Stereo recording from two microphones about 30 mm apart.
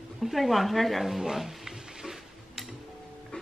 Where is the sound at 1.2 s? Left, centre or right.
Centre.